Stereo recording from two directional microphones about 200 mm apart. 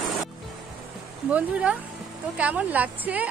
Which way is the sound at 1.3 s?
5° right (ahead or behind).